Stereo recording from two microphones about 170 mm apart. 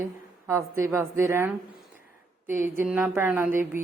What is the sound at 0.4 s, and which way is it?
Speech, 15° right (ahead or behind).